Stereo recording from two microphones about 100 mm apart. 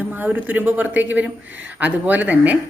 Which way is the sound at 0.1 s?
15° right (ahead or behind).